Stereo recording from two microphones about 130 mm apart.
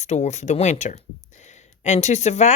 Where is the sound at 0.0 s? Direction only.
60° left (ahead or behind).